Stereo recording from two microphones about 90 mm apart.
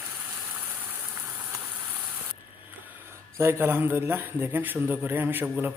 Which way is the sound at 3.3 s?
30° right (ahead or behind).